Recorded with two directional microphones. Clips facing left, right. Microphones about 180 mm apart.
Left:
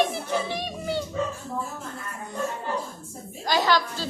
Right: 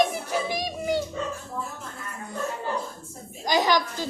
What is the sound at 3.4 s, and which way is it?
Speech, 15° right (ahead or behind).